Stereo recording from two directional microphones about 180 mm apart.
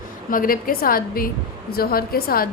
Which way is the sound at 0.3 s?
50° left (ahead or behind).